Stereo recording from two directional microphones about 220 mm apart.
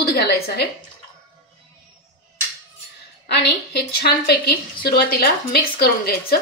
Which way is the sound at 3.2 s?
50° left (ahead or behind).